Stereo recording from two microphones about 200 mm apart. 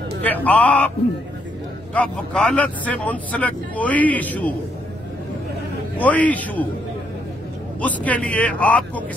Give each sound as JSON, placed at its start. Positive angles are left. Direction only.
{"t": 0.2, "sound": "speech", "side_deg": 10}
{"t": 2.0, "sound": "speech", "side_deg": 5}
{"t": 5.9, "sound": "speech", "side_deg": 5}
{"t": 7.8, "sound": "speech", "side_deg": 5}